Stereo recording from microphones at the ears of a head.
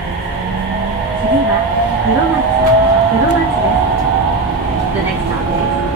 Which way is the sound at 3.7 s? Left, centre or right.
Right.